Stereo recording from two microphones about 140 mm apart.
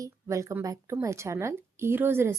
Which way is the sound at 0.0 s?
20° right (ahead or behind).